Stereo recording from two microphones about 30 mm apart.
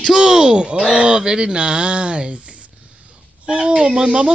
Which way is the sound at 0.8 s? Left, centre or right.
Right.